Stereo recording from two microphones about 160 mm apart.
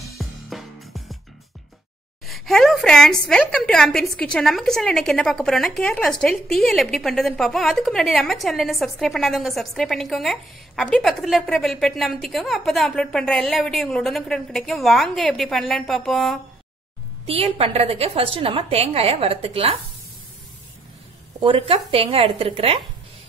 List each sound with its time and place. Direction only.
0.2 s music: centre (ahead or behind)
2.2 s a woman's voice: centre (ahead or behind)
17.3 s a woman's voice: 40° right (ahead or behind)
21.4 s a woman's voice: 35° right (ahead or behind)